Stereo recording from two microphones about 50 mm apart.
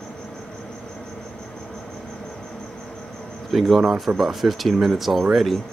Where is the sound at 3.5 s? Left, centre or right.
Centre.